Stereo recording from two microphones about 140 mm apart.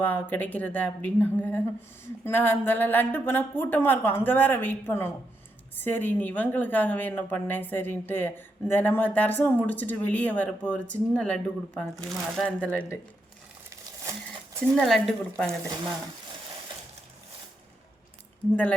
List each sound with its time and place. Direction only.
0.0 s a woman's voice: 10° left (ahead or behind)
14.0 s a sound: 20° right (ahead or behind)
14.6 s speech: 5° left (ahead or behind)